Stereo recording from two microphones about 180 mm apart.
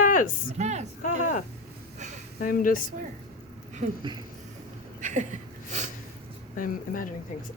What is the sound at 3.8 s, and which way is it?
Speech, 40° right (ahead or behind).